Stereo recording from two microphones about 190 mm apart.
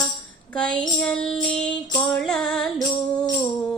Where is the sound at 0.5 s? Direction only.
5° left (ahead or behind).